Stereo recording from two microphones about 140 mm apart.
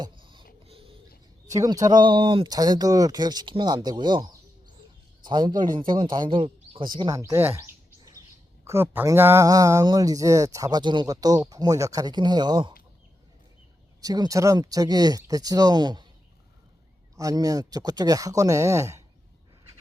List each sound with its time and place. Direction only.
0.0 s a sound: 35° right (ahead or behind)
1.5 s a man's voice: 25° right (ahead or behind)
14.0 s speech: 25° right (ahead or behind)
17.2 s speech: 25° right (ahead or behind)